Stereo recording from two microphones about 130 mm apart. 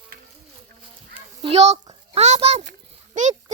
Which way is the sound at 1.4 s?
50° right (ahead or behind).